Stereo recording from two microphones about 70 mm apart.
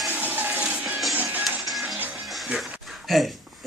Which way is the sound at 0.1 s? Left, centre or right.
Right.